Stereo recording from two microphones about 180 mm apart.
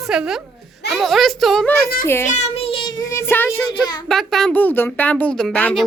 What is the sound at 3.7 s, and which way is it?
Speech, 25° left (ahead or behind).